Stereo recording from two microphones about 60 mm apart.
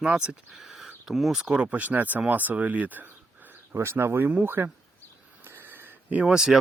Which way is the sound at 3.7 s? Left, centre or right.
Right.